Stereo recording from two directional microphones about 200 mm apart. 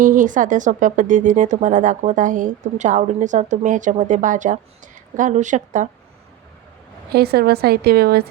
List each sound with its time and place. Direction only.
0.0 s speech: 40° right (ahead or behind)
7.1 s a woman's voice: 50° right (ahead or behind)